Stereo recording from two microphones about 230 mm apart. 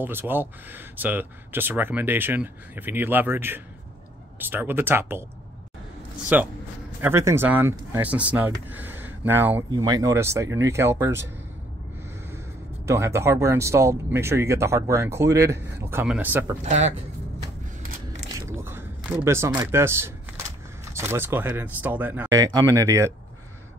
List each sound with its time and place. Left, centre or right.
0.0 s speech: centre
6.2 s speech: centre
12.8 s speech: centre
16.6 s speech: right
17.8 s mechanisms: right
18.6 s a sound: centre
19.2 s speech: centre